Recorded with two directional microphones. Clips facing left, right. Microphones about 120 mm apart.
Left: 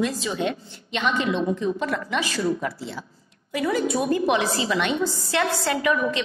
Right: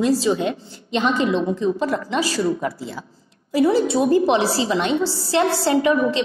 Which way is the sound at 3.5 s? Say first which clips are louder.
Right 6 dB; 30° right (ahead or behind).